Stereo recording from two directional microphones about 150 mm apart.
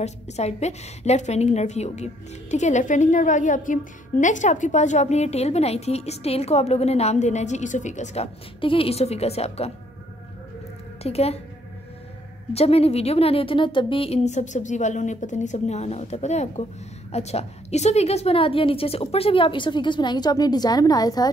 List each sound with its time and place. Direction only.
0.0 s a woman's voice: 45° left (ahead or behind)
11.0 s a woman's voice: 45° left (ahead or behind)
12.5 s a woman's voice: 40° left (ahead or behind); by 21.3 s 25° left (ahead or behind)